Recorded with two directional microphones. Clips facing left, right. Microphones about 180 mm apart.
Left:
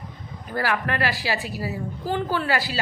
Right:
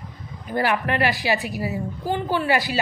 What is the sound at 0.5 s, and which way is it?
A woman's voice, 20° right (ahead or behind).